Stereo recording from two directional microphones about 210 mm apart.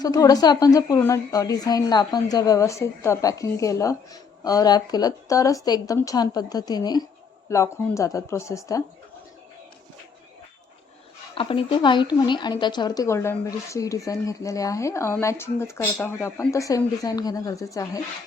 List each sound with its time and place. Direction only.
0.0 s a woman's voice: 15° left (ahead or behind)
11.3 s a woman's voice: 25° left (ahead or behind)